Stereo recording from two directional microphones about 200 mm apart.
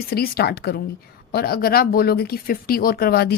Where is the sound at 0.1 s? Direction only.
50° left (ahead or behind).